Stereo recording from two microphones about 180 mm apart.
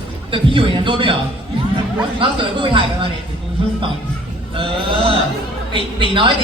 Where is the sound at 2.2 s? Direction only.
30° right (ahead or behind).